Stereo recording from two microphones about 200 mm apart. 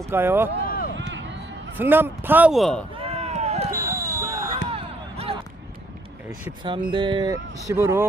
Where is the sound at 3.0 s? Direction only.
30° right (ahead or behind).